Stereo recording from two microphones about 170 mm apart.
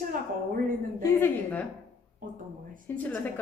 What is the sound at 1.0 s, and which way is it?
Speech, 10° left (ahead or behind).